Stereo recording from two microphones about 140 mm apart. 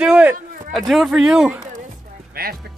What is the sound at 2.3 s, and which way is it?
Speech, 90° right.